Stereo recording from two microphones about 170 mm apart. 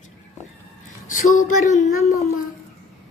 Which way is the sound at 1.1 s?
50° left (ahead or behind).